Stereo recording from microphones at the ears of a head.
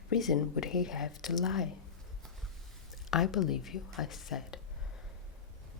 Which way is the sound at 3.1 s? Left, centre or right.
Left.